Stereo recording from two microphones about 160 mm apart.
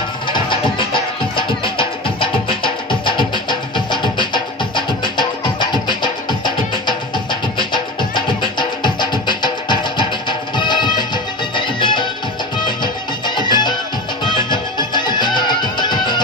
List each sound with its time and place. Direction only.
0.3 s music: 30° left (ahead or behind)
7.5 s music: 30° left (ahead or behind)